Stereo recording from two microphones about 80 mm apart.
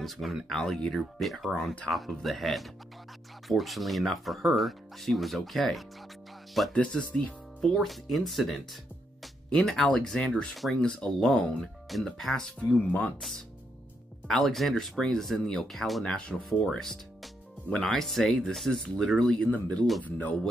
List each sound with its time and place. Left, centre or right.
0.0 s speech: centre
6.7 s speech: centre
7.7 s speech: centre
9.7 s speech: centre
12.8 s speech: centre
14.2 s speech: centre